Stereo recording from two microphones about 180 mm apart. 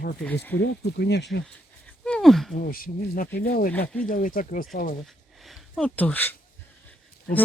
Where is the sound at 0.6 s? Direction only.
70° left (ahead or behind).